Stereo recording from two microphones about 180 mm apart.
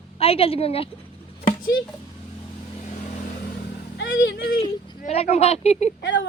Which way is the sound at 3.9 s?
70° left (ahead or behind).